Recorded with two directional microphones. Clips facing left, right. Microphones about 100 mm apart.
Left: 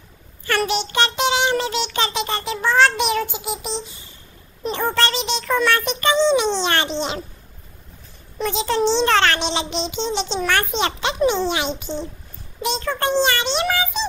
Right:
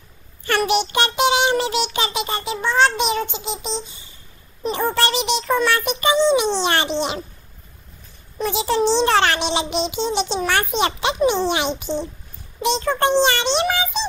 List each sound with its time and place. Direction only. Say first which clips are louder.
0.7 s child singing: right 2 dB; 15° right (ahead or behind); by 3.2 s centre (ahead or behind)
3.3 s a sound: even; 10° left (ahead or behind)
4.6 s a child's voice: right 1 dB; 10° right (ahead or behind)
8.5 s a child's voice: right 1 dB; 15° right (ahead or behind)